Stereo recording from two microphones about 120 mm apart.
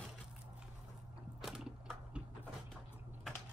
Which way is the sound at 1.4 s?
5° right (ahead or behind).